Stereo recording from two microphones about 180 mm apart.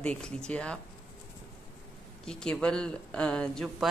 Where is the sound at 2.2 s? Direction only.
5° left (ahead or behind).